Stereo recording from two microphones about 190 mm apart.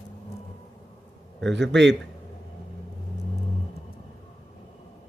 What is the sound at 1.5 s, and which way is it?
Speech, 70° right (ahead or behind).